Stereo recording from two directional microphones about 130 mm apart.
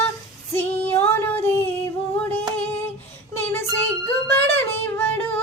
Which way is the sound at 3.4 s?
15° left (ahead or behind).